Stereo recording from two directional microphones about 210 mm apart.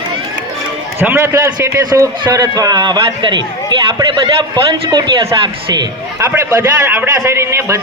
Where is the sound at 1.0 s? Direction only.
10° right (ahead or behind).